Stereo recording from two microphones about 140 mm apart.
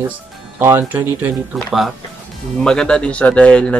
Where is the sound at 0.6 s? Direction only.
15° right (ahead or behind).